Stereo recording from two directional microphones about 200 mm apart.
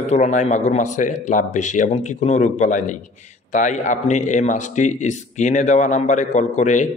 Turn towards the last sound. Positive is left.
turn(degrees=35)  # may be behind; listen again after turning